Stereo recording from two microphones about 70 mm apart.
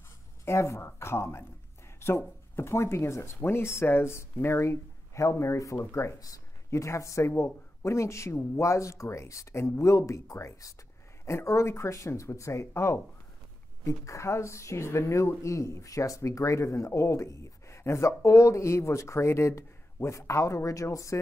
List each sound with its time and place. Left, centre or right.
0.5 s speech: left
6.1 s speech: left
6.7 s speech: left